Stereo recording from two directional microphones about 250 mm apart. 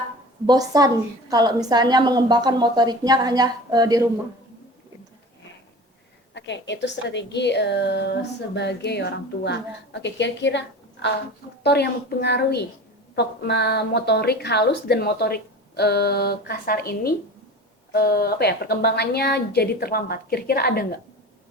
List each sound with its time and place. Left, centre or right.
0.4 s a woman's voice: centre
6.3 s a woman's voice: left